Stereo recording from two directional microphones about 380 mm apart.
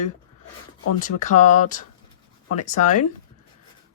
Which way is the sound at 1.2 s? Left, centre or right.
Centre.